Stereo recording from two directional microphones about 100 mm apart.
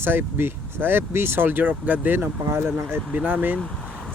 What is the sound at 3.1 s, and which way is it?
Speech, 15° right (ahead or behind).